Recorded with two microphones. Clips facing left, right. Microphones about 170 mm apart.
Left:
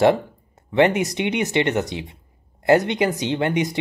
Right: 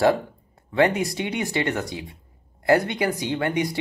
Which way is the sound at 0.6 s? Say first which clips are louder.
Left 3 dB; 20° left (ahead or behind).